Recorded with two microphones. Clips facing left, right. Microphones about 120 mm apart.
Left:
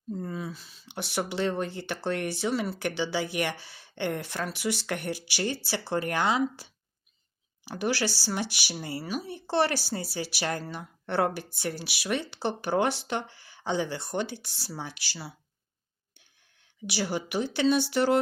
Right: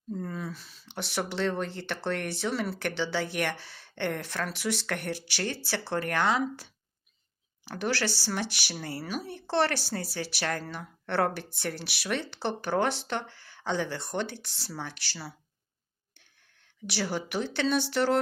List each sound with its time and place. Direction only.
0.1 s speech: 5° left (ahead or behind)
16.8 s speech: 5° left (ahead or behind)